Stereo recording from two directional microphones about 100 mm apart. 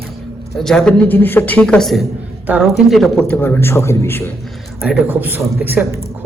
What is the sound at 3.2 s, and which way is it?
A man's voice, 20° left (ahead or behind).